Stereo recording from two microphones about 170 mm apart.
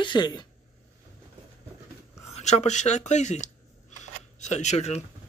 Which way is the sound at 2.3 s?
40° left (ahead or behind).